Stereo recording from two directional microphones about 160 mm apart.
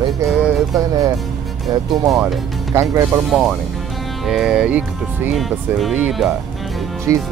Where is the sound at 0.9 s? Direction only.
25° right (ahead or behind).